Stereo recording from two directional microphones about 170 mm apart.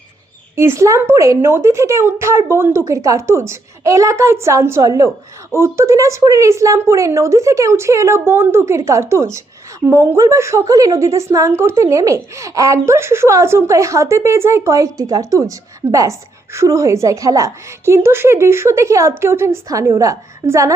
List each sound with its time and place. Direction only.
0.5 s a woman's voice: 15° right (ahead or behind)